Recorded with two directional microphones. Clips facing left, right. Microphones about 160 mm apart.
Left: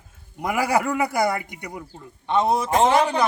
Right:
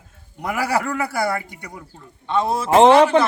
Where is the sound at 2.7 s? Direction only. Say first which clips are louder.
Right 8 dB; 85° right.